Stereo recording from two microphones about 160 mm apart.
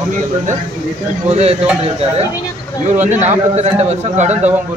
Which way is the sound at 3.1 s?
45° right (ahead or behind).